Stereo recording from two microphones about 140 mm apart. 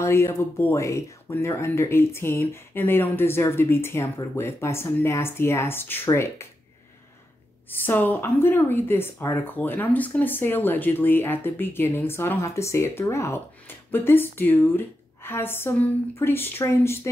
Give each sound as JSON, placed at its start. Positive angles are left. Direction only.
{"t": 0.0, "sound": "speech", "side_deg": 20}
{"t": 7.8, "sound": "speech", "side_deg": 15}